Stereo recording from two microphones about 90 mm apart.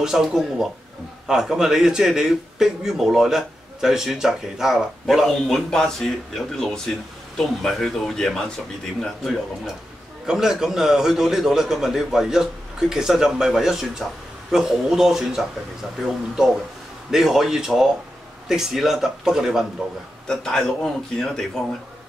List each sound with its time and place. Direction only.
0.0 s a man's voice: 5° right (ahead or behind)
17.1 s a man's voice: 5° right (ahead or behind)
20.2 s a man's voice: 5° left (ahead or behind)